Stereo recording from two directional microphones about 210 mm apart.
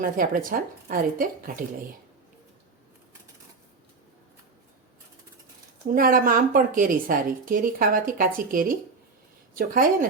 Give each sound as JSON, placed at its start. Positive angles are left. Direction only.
{"t": 0.2, "sound": "a woman's voice", "side_deg": -40}
{"t": 5.9, "sound": "a woman's voice", "side_deg": -40}